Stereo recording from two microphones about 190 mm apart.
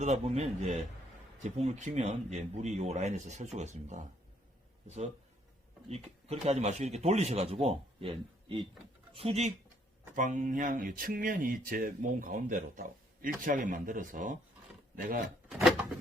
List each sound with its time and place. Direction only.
0.0 s speech: 35° right (ahead or behind)
1.5 s speech: 35° right (ahead or behind)
5.9 s speech: 35° right (ahead or behind)
15.4 s a sound: 5° right (ahead or behind)